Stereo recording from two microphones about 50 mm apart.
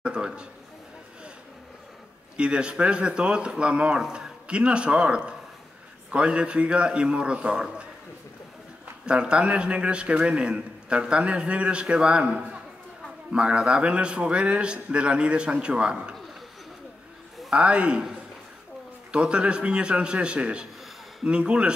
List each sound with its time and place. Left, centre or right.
0.0 s a sound: centre
2.3 s a man's voice: right
9.0 s a man's voice: centre
17.5 s a man's voice: centre
19.1 s a man's voice: right